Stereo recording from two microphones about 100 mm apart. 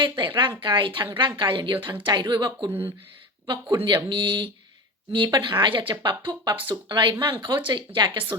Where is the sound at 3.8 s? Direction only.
50° right (ahead or behind).